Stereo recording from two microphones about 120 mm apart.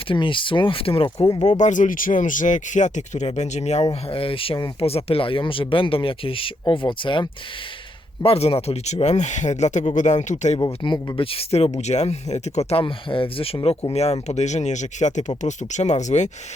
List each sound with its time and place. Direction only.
0.1 s speech: 45° left (ahead or behind)
1.5 s speech: 90° left; by 3.8 s 65° left (ahead or behind)
4.0 s speech: 50° left (ahead or behind)
8.2 s speech: 55° left (ahead or behind); by 10.6 s 80° left
10.8 s speech: 35° left (ahead or behind)
11.3 s speech: 55° left (ahead or behind)
11.8 s speech: 70° left (ahead or behind)
12.8 s speech: 45° left (ahead or behind); by 16.3 s 75° left (ahead or behind)